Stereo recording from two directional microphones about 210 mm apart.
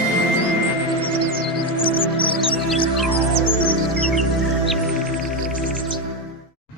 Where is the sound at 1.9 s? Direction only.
25° left (ahead or behind).